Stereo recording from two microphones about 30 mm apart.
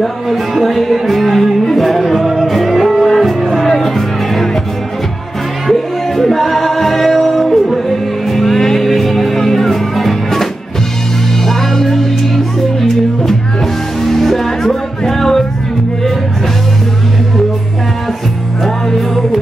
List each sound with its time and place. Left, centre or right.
0.0 s music: centre
5.7 s music: centre
14.0 s music: centre